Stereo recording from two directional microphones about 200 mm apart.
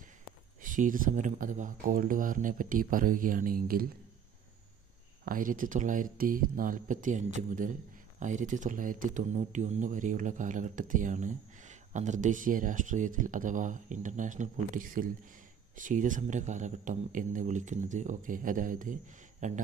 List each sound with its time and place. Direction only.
0.6 s speech: 40° right (ahead or behind)
5.2 s speech: 45° right (ahead or behind)